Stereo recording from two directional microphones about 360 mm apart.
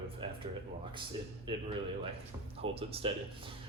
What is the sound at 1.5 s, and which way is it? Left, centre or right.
Speech, centre.